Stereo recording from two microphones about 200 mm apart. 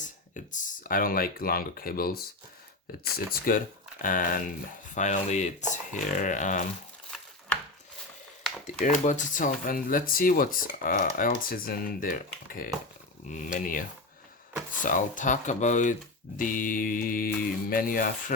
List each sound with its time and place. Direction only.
0.4 s speech: 40° left (ahead or behind)
8.8 s speech: 40° left (ahead or behind)
14.8 s speech: 40° left (ahead or behind)